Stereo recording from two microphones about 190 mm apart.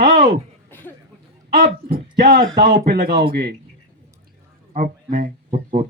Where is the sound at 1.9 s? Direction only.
50° right (ahead or behind).